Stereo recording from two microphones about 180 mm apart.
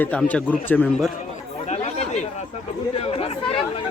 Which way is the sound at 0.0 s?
5° left (ahead or behind).